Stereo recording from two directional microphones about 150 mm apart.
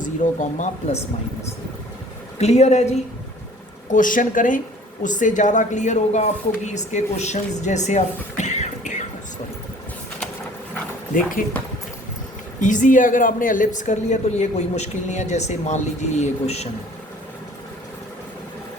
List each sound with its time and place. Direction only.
0.0 s speech: 55° left (ahead or behind)
2.4 s speech: 45° left (ahead or behind)
3.8 s a woman's voice: 60° left (ahead or behind)
11.1 s speech: 65° left (ahead or behind)
12.5 s speech: 55° left (ahead or behind)